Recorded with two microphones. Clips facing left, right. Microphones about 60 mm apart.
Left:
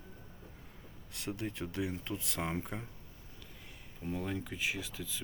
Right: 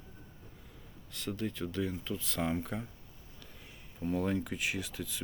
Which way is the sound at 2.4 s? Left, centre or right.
Centre.